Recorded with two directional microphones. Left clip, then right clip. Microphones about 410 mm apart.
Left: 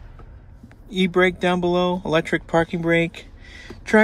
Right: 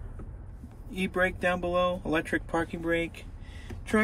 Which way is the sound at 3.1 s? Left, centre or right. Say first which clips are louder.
Left 8 dB; left.